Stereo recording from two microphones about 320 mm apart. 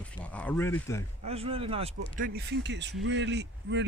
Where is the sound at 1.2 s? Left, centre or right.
Centre.